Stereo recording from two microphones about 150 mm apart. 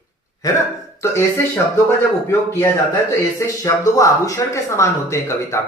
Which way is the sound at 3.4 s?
20° left (ahead or behind).